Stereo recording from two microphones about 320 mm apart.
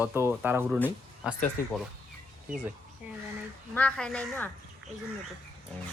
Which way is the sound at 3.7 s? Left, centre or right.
Centre.